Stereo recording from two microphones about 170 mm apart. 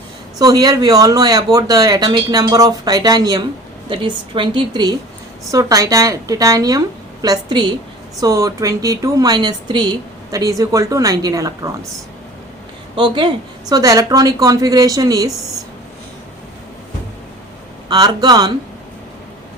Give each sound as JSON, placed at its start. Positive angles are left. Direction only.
{"t": 0.3, "sound": "speech", "side_deg": -20}
{"t": 13.0, "sound": "speech", "side_deg": -25}
{"t": 17.8, "sound": "speech", "side_deg": -25}